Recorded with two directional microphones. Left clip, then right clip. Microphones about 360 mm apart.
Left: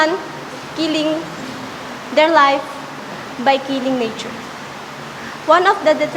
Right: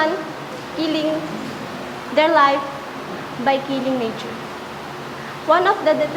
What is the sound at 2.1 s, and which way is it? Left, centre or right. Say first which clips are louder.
A woman's voice: left 3 dB; centre.